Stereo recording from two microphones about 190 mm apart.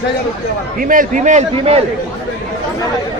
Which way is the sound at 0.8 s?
45° right (ahead or behind).